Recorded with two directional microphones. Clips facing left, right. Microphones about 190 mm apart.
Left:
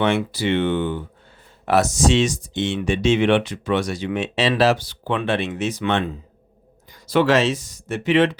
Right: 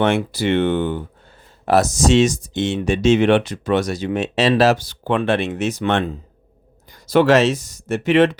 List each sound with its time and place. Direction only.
0.0 s speech: 45° right (ahead or behind)
7.1 s speech: 45° right (ahead or behind)